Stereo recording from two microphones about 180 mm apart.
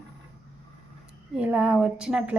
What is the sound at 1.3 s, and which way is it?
A woman's voice, 5° right (ahead or behind).